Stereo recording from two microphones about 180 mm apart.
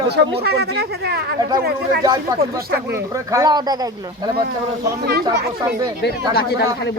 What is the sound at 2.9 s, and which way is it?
Speech, 15° right (ahead or behind).